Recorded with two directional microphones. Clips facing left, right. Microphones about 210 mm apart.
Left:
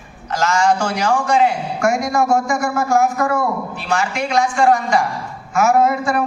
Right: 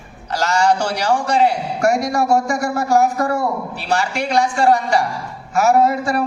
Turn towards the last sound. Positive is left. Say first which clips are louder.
# even
turn(degrees=-35)  # may be behind; listen again after turning